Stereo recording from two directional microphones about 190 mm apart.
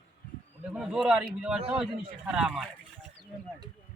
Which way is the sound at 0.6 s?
5° right (ahead or behind).